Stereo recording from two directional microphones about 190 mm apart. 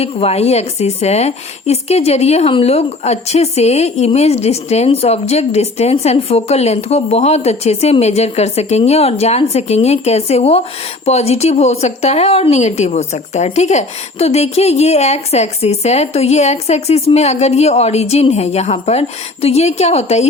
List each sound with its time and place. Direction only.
0.0 s a woman's voice: 35° left (ahead or behind)